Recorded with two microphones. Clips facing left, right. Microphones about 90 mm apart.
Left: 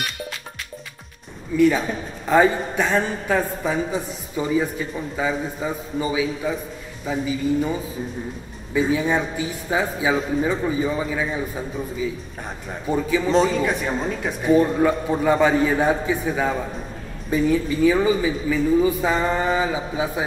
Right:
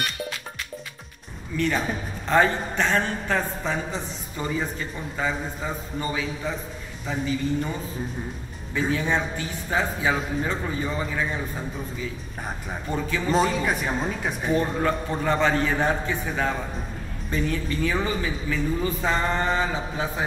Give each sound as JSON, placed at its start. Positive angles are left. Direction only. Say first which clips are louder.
{"t": 1.6, "sound": "a man's voice", "louder": "left 7 dB", "side_deg": 5}
{"t": 13.3, "sound": "a man's voice", "louder": "left 2 dB", "side_deg": -5}